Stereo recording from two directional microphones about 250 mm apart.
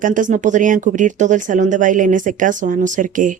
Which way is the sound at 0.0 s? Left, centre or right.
Right.